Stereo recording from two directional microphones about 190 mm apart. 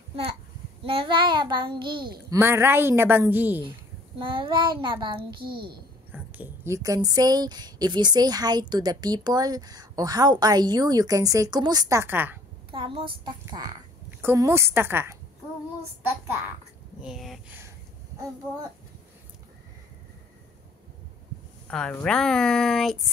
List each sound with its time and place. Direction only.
0.8 s a child's voice: 25° right (ahead or behind); by 3.6 s 10° right (ahead or behind)
4.2 s a woman's voice: 25° right (ahead or behind)
5.4 s a child's voice: 55° right (ahead or behind)
6.1 s a woman's voice: 10° right (ahead or behind)
12.7 s a woman's voice: 25° right (ahead or behind)
17.0 s speech: centre (ahead or behind)
21.6 s speech: 5° left (ahead or behind)